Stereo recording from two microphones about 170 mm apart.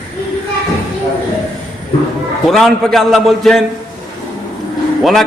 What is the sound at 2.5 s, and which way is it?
A man's voice, centre (ahead or behind).